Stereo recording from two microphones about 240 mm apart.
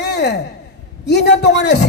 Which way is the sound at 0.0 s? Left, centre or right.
Left.